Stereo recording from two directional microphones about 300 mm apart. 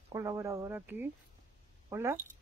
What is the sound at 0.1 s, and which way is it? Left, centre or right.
Speech, centre.